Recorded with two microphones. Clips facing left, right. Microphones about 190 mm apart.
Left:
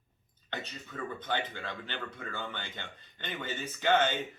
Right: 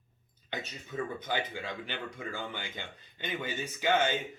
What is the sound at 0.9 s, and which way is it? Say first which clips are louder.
Speech: right 1 dB; 20° right (ahead or behind).